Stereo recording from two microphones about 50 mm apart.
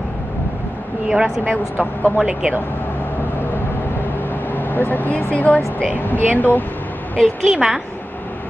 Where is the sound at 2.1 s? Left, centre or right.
Right.